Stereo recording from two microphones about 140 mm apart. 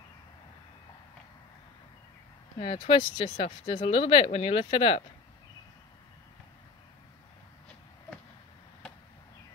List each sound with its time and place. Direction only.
2.6 s speech: 40° left (ahead or behind)